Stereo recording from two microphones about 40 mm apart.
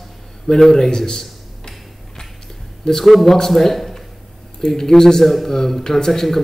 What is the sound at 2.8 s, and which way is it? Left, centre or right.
A man's voice, centre.